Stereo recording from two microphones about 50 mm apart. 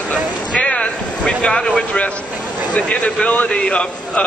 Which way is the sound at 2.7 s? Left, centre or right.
Left.